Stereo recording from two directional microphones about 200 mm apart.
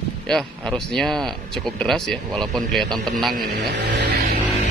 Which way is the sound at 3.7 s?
50° right (ahead or behind).